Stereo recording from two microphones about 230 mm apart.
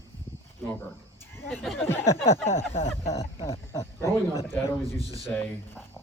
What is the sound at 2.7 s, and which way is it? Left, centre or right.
Speech, left.